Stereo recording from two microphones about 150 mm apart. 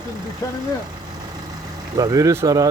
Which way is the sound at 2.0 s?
20° right (ahead or behind).